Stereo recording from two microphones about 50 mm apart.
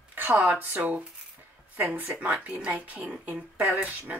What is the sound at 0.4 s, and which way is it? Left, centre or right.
Speech, right.